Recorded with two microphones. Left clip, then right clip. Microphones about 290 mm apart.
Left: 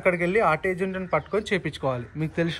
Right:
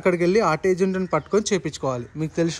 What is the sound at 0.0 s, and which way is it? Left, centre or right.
Speech, right.